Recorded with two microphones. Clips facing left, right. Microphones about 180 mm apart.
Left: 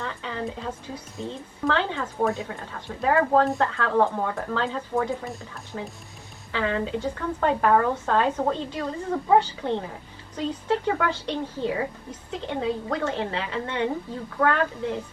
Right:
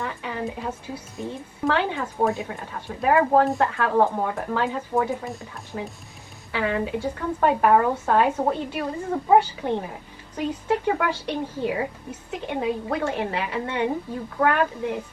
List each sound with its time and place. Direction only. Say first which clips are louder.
0.0 s speech: right 2 dB; 15° right (ahead or behind)
3.9 s speech: right 1 dB; 45° right (ahead or behind)
4.2 s speech: right 2 dB; 20° right (ahead or behind)
5.7 s speech: right 2 dB; 30° right (ahead or behind)
6.6 s a woman's voice: right 1 dB; 15° right (ahead or behind)